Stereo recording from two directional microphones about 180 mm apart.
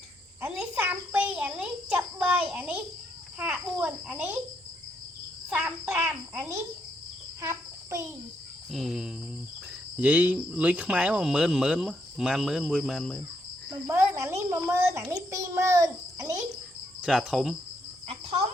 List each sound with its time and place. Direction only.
0.4 s a sound: 5° right (ahead or behind)
3.3 s a woman's voice: 10° right (ahead or behind)
5.5 s a woman's voice: 10° right (ahead or behind)
7.4 s insect: 15° right (ahead or behind)
8.7 s speech: centre (ahead or behind)
13.8 s a woman's voice: 15° right (ahead or behind)
17.0 s speech: 5° right (ahead or behind)
18.1 s cricket: 35° right (ahead or behind)